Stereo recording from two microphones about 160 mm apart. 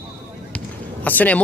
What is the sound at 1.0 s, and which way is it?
Speech, 10° left (ahead or behind).